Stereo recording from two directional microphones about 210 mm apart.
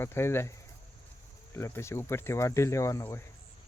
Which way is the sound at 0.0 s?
10° left (ahead or behind).